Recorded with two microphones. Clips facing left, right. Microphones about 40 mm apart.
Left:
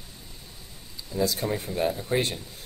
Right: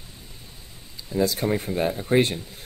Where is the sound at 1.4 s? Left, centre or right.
Right.